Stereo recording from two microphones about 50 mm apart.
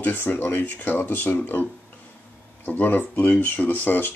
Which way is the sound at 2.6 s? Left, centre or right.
Left.